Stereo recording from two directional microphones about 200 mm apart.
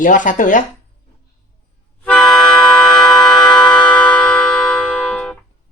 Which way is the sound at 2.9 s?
5° left (ahead or behind).